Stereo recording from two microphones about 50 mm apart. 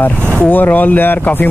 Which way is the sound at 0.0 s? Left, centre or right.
Left.